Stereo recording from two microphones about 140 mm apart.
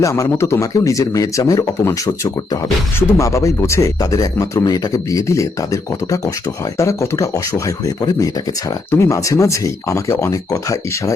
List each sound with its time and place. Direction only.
0.0 s speech: 20° left (ahead or behind)